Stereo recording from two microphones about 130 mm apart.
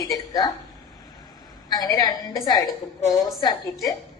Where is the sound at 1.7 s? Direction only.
25° left (ahead or behind).